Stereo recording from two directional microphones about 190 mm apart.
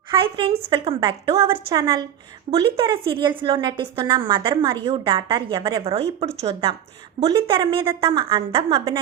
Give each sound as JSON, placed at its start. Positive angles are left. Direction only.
{"t": 0.2, "sound": "a woman's voice", "side_deg": -30}